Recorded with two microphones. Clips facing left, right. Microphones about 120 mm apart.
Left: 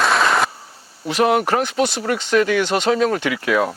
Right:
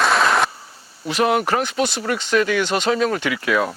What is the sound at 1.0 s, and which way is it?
Speech, 50° left (ahead or behind).